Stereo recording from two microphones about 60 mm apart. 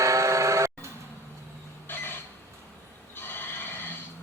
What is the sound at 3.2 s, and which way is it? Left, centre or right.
Neigh, left.